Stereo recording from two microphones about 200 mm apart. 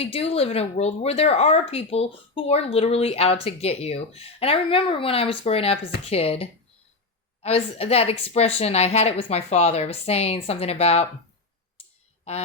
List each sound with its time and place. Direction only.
0.0 s a woman's voice: 30° left (ahead or behind)